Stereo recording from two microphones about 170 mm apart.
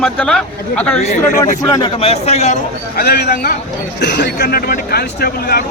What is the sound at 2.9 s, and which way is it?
A man's voice, 70° left (ahead or behind).